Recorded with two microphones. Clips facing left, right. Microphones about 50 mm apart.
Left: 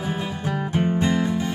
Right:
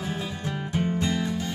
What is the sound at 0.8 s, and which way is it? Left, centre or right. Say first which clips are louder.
Music: left 5 dB; left.